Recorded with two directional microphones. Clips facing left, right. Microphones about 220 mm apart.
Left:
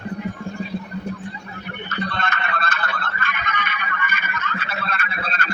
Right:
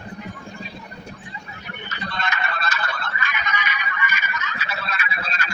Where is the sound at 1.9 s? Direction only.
55° left (ahead or behind).